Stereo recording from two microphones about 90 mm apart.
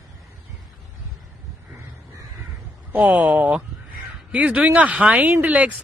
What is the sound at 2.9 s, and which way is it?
Speech, 15° right (ahead or behind).